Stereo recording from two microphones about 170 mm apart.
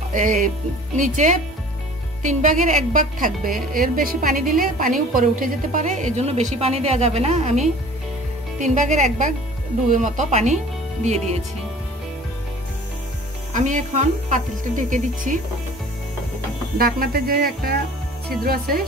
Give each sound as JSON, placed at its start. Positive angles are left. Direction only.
{"t": 0.9, "sound": "a woman's voice", "side_deg": -45}
{"t": 13.5, "sound": "a woman's voice", "side_deg": -50}
{"t": 16.7, "sound": "a woman's voice", "side_deg": -60}